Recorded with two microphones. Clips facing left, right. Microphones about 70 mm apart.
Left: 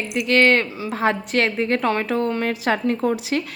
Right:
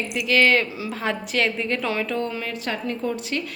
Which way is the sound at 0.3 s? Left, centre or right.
Left.